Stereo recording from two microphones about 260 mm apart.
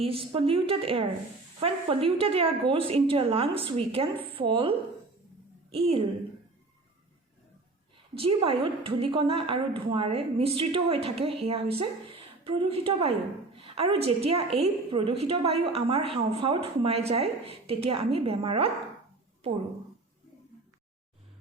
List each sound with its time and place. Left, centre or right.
0.0 s a woman's voice: right
8.2 s a woman's voice: right